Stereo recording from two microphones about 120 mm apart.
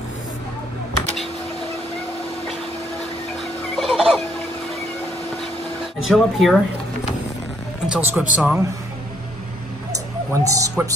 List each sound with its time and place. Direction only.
3.3 s fowl: centre (ahead or behind)
5.9 s speech: centre (ahead or behind)
7.8 s speech: 10° right (ahead or behind)
9.9 s music: 25° right (ahead or behind)